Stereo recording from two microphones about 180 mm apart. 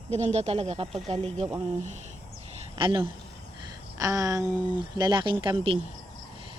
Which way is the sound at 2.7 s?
30° right (ahead or behind).